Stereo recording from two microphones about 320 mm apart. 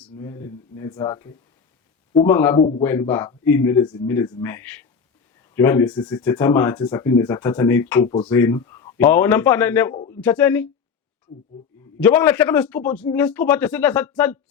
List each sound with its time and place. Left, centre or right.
0.0 s speech: centre
9.9 s speech: centre
10.2 s a man's voice: centre
11.9 s a man's voice: centre